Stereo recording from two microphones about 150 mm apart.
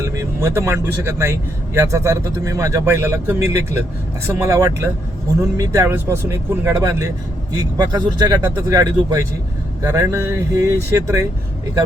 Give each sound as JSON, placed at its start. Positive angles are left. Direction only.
{"t": 0.0, "sound": "speech", "side_deg": -20}